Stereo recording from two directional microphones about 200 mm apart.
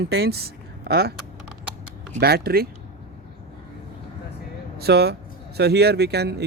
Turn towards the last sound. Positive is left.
turn(degrees=-55)  # may be behind; listen again after turning